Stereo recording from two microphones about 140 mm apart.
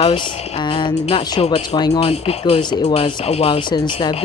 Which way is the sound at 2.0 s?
45° left (ahead or behind).